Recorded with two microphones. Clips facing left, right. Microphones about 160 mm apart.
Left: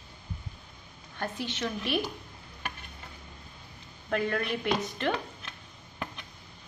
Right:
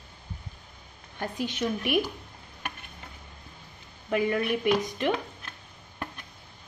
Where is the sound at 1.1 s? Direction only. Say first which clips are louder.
Right 3 dB; 15° right (ahead or behind).